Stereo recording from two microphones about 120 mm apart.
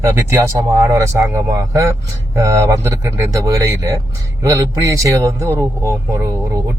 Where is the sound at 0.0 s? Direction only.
25° right (ahead or behind).